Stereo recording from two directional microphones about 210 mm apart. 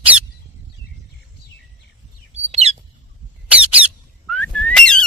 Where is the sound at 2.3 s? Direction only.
30° right (ahead or behind).